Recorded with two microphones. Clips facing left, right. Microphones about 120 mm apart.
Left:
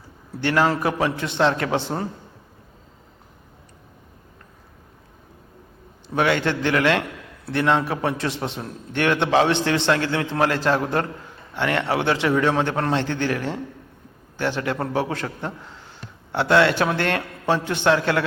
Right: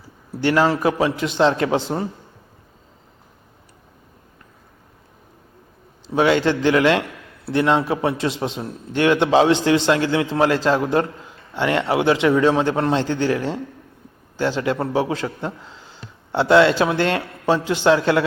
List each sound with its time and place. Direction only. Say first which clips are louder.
0.4 s a man's voice: right 3 dB; 20° right (ahead or behind)
6.1 s a man's voice: right 4 dB; 20° right (ahead or behind)